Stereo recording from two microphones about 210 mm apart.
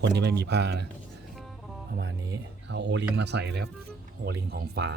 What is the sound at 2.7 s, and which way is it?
Speech, 55° right (ahead or behind).